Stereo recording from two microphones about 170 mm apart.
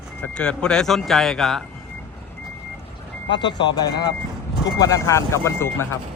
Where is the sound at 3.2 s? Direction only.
25° left (ahead or behind).